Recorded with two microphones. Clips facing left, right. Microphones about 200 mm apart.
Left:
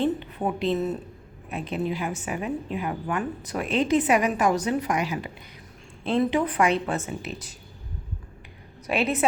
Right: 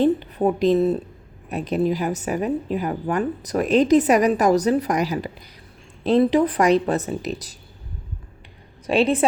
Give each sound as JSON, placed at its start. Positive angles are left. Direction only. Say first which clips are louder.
{"t": 0.0, "sound": "a woman's voice", "louder": "right 7 dB", "side_deg": -40}
{"t": 8.9, "sound": "a woman's voice", "louder": "right 6 dB", "side_deg": -30}